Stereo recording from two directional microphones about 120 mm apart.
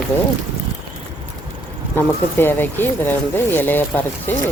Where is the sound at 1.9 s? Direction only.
15° left (ahead or behind).